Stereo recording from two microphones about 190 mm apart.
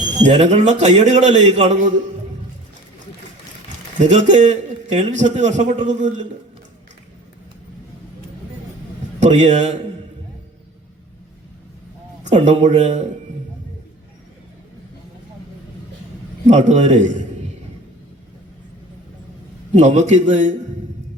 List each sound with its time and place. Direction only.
0.2 s a man's voice: 40° right (ahead or behind)
4.1 s a man's voice: 40° right (ahead or behind)
9.2 s a man's voice: 40° right (ahead or behind)
12.2 s a man's voice: 40° right (ahead or behind)
16.5 s a man's voice: 40° right (ahead or behind)
19.7 s a man's voice: 40° right (ahead or behind)